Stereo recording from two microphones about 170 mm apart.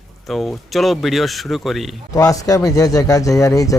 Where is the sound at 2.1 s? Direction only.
20° left (ahead or behind).